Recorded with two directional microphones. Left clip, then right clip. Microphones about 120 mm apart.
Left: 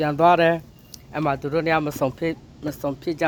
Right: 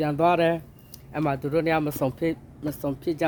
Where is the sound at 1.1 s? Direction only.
35° right (ahead or behind).